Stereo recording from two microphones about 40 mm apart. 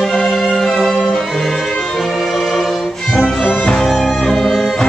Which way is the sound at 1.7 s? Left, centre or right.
Centre.